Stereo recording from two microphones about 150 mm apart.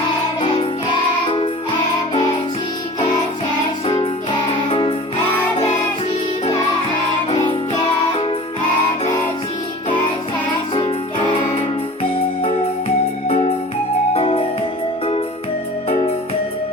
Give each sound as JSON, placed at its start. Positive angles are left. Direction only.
{"t": 3.8, "sound": "music", "side_deg": 35}
{"t": 12.0, "sound": "music", "side_deg": 40}